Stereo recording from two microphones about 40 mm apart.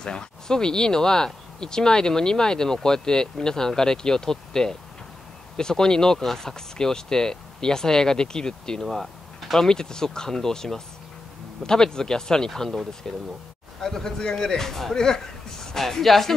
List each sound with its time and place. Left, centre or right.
0.0 s speech: centre
6.1 s speech: centre
6.4 s speech: centre
8.9 s a sound: centre
9.6 s speech: centre
12.4 s speech: centre
13.0 s speech: centre